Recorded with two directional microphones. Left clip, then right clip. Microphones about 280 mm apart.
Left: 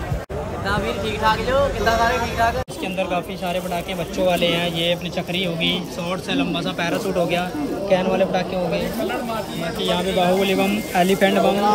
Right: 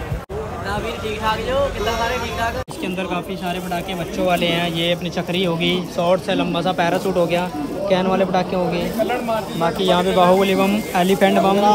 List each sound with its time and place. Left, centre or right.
1.2 s speech: centre
4.3 s speech: centre
7.9 s speech: right
9.6 s speech: centre